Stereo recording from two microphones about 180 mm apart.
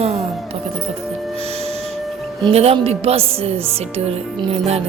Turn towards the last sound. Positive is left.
turn(degrees=-35)  # may be behind; listen again after turning